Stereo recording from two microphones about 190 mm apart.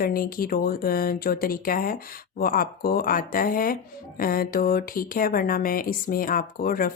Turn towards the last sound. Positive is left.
turn(degrees=50)  # may be behind; listen again after turning